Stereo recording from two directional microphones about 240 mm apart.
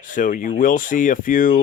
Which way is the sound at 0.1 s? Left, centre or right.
Left.